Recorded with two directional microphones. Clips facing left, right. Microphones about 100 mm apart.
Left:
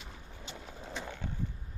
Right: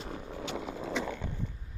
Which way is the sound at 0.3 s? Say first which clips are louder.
Right 11 dB; 90° right.